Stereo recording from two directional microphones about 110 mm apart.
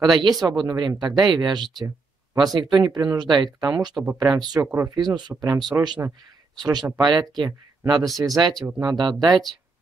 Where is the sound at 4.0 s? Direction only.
20° right (ahead or behind).